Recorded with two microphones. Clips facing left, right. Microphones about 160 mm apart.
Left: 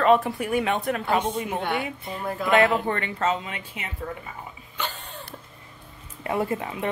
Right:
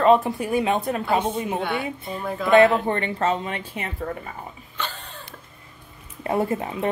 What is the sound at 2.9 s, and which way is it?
Speech, 30° right (ahead or behind).